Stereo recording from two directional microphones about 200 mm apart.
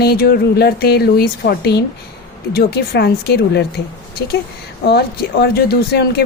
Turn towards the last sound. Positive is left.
turn(degrees=55)  # may be behind; listen again after turning